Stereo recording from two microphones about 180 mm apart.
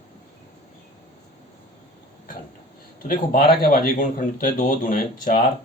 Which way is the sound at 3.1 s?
50° left (ahead or behind).